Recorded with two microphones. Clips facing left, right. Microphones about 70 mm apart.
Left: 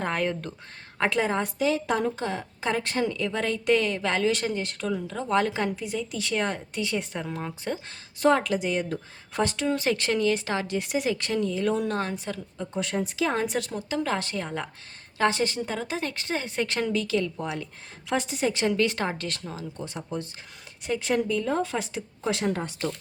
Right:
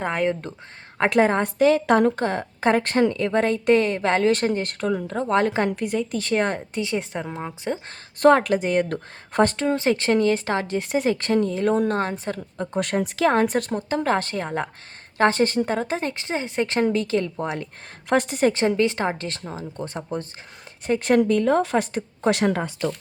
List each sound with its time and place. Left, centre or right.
0.0 s a woman's voice: centre
1.1 s a woman's voice: right
6.7 s a woman's voice: right
7.9 s a woman's voice: right
9.6 s speech: right
12.7 s a woman's voice: right
18.1 s a woman's voice: right
18.5 s speech: right
20.8 s speech: right